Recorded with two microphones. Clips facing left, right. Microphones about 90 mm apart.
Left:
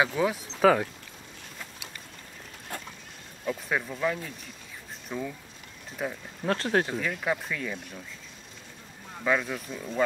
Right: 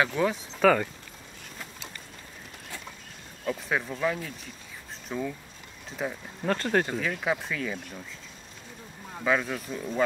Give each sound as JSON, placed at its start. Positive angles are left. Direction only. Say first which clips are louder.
{"t": 0.0, "sound": "speech", "louder": "even", "side_deg": 5}
{"t": 2.7, "sound": "vehicle", "louder": "left 5 dB", "side_deg": 50}
{"t": 3.4, "sound": "speech", "louder": "right 1 dB", "side_deg": 0}
{"t": 9.2, "sound": "speech", "louder": "right 1 dB", "side_deg": 0}